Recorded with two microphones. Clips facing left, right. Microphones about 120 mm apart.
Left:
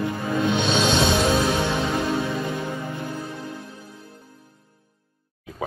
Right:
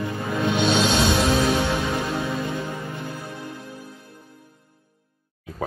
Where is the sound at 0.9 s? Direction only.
25° left (ahead or behind).